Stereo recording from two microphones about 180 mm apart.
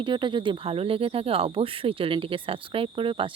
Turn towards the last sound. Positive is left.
turn(degrees=-30)  # may be behind; listen again after turning